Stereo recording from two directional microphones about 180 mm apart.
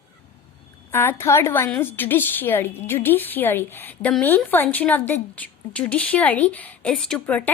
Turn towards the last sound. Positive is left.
turn(degrees=5)  # may be behind; listen again after turning